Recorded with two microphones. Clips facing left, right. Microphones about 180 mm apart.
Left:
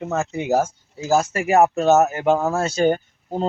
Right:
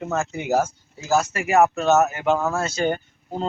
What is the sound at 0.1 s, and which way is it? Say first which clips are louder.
Speech: left 2 dB; 20° left (ahead or behind).